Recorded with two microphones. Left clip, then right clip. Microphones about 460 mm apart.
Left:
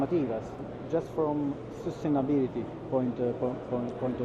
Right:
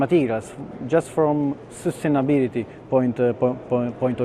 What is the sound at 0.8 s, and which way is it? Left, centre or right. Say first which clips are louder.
Speech: right 10 dB; right.